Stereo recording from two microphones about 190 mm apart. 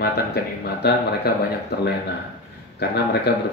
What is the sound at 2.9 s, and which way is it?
Speech, 60° left (ahead or behind).